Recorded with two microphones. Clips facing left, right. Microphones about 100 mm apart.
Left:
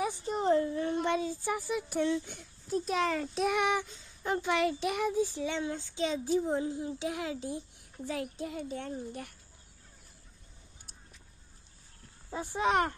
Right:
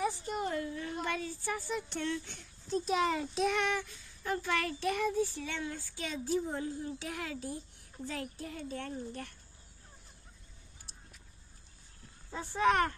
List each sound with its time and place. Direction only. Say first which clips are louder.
0.3 s a sound: left 7 dB; 30° left (ahead or behind)
1.0 s speech: left 5 dB; 20° left (ahead or behind)
2.8 s a child's voice: even; 5° right (ahead or behind)
3.5 s a child's voice: left 4 dB; 15° left (ahead or behind)
12.3 s a child's voice: right 1 dB; 20° left (ahead or behind)